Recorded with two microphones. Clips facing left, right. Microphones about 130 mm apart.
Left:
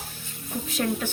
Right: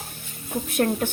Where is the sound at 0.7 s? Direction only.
50° right (ahead or behind).